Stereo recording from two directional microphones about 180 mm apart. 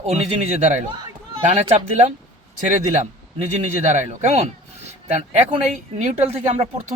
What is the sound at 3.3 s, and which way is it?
A man's voice, 40° right (ahead or behind).